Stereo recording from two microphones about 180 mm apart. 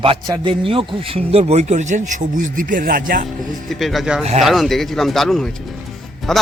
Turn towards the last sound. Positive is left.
turn(degrees=0)  # may be behind; listen again after turning